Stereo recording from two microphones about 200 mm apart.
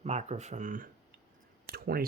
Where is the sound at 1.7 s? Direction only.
50° right (ahead or behind).